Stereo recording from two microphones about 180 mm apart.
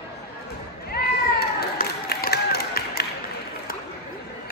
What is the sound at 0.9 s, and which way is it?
Run, 60° left (ahead or behind).